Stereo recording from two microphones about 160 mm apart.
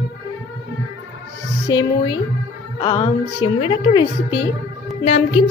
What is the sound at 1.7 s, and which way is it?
A woman's voice, 30° left (ahead or behind).